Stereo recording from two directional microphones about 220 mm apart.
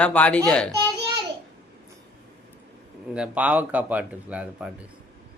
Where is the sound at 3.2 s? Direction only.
5° right (ahead or behind).